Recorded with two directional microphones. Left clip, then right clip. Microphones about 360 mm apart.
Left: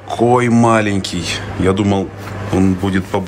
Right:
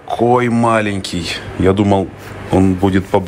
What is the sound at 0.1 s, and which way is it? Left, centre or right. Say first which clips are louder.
Speech: even; centre.